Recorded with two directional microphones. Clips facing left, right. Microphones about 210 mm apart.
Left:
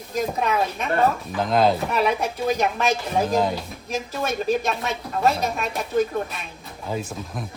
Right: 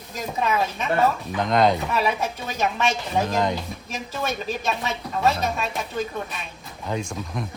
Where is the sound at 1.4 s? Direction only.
5° left (ahead or behind).